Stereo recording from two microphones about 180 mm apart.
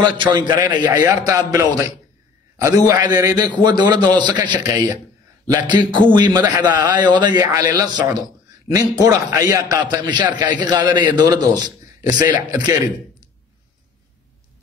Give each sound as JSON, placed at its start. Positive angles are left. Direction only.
{"t": 0.0, "sound": "a man's voice", "side_deg": -25}